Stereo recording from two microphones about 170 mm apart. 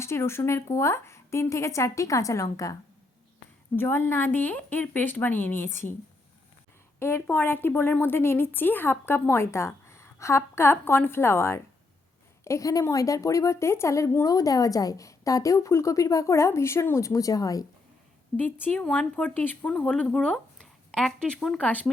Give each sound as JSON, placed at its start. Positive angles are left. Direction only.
{"t": 0.0, "sound": "a woman's voice", "side_deg": 15}
{"t": 3.8, "sound": "a woman's voice", "side_deg": 15}
{"t": 7.0, "sound": "a woman's voice", "side_deg": 15}
{"t": 18.6, "sound": "a woman's voice", "side_deg": 5}